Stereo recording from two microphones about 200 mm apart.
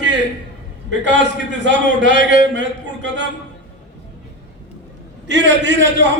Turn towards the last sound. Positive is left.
turn(degrees=-65)  # may be behind; listen again after turning